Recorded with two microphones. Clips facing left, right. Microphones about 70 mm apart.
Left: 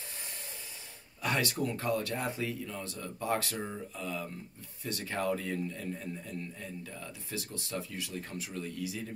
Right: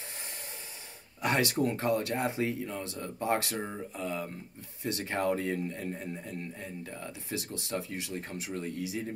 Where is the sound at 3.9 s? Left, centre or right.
Right.